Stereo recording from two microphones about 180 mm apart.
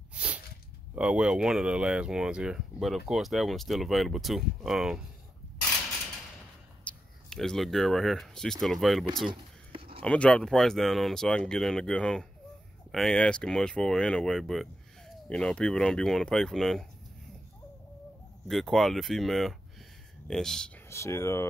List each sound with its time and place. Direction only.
0.1 s a sound: 5° right (ahead or behind)
0.9 s speech: 5° right (ahead or behind)
6.8 s speech: 5° left (ahead or behind)
9.3 s a sound: 30° right (ahead or behind)
10.0 s speech: 5° left (ahead or behind)
18.5 s speech: centre (ahead or behind)
20.9 s speech: 15° left (ahead or behind)